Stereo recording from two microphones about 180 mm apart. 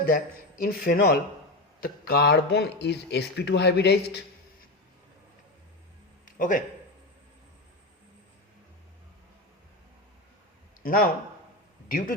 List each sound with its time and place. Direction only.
0.6 s speech: 55° left (ahead or behind)
6.2 s a sound: 50° left (ahead or behind)
10.8 s a man's voice: 55° left (ahead or behind)